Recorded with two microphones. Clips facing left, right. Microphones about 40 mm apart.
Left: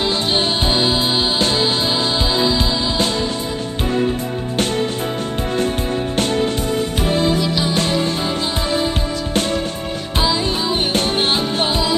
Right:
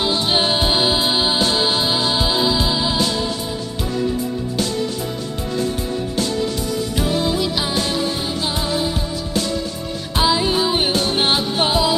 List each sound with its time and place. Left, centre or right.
0.3 s music: centre
7.0 s music: left
10.2 s music: centre
11.6 s music: centre